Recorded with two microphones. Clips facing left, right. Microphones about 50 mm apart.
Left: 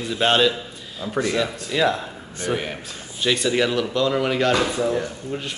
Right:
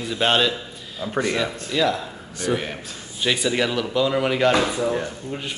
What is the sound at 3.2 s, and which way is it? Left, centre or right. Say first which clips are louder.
Speech: left 1 dB; centre.